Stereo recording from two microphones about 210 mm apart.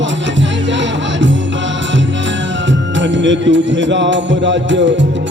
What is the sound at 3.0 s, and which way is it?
Music, 60° right (ahead or behind).